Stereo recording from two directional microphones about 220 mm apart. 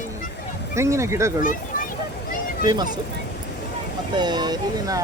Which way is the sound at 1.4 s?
40° left (ahead or behind).